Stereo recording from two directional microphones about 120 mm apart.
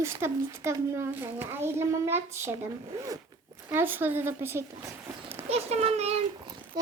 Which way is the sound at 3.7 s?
15° right (ahead or behind).